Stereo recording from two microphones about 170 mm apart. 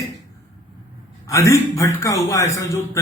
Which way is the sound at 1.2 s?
15° left (ahead or behind).